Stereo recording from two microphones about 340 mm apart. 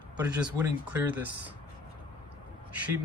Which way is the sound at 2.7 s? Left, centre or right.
Centre.